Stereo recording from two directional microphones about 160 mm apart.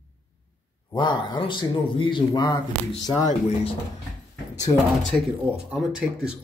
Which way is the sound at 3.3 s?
40° left (ahead or behind).